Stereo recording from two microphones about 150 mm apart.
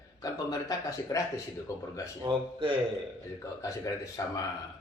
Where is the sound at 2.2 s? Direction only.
35° right (ahead or behind).